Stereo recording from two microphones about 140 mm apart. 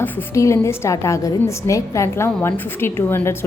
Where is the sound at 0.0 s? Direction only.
20° left (ahead or behind).